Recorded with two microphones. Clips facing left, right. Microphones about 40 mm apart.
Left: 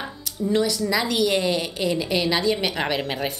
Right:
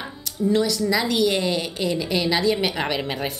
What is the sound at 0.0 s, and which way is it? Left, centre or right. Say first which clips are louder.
A woman's voice: right 3 dB; centre.